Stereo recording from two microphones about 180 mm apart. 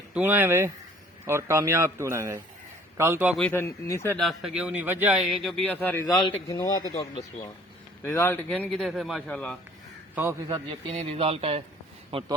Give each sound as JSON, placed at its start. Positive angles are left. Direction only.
{"t": 0.1, "sound": "a man's voice", "side_deg": -10}
{"t": 3.3, "sound": "speech", "side_deg": 10}
{"t": 4.2, "sound": "a man's voice", "side_deg": 0}
{"t": 5.9, "sound": "a man's voice", "side_deg": 15}
{"t": 10.5, "sound": "a man's voice", "side_deg": -30}